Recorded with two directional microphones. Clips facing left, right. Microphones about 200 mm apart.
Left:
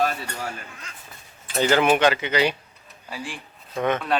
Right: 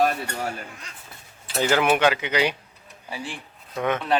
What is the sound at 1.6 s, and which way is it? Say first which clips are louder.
Speech: left 1 dB; 10° right (ahead or behind).